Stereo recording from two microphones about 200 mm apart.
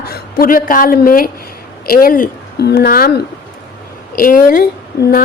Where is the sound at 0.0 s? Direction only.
50° left (ahead or behind).